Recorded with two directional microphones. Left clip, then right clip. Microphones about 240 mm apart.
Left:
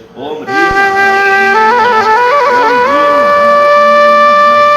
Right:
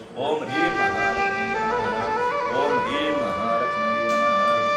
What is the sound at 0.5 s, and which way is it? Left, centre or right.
Flute, left.